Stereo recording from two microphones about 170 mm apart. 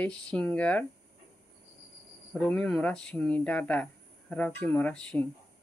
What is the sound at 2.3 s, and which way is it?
Speech, 5° left (ahead or behind).